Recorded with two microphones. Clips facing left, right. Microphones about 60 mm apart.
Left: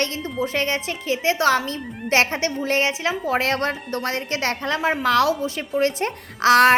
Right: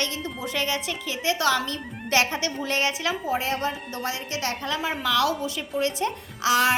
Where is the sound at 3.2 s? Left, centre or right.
Left.